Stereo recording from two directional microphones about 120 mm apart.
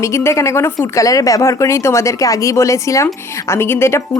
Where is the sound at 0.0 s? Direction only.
20° left (ahead or behind).